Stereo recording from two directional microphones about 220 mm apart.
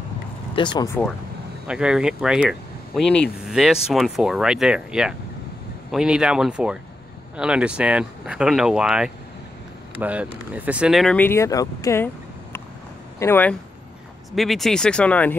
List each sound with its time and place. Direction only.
0.6 s speech: 20° left (ahead or behind)
1.7 s speech: 5° right (ahead or behind); by 12.1 s 15° left (ahead or behind)
13.2 s speech: 10° left (ahead or behind)